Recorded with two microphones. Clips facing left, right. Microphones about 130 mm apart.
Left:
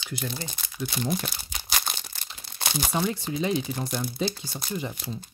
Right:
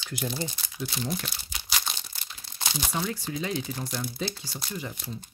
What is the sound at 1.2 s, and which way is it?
Tearing, 50° left (ahead or behind).